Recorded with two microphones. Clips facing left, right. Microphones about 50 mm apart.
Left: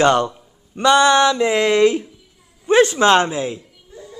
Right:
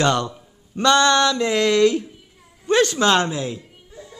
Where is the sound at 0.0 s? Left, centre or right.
Left.